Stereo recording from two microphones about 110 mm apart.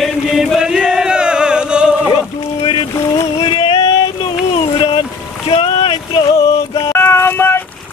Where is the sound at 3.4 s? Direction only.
55° left (ahead or behind).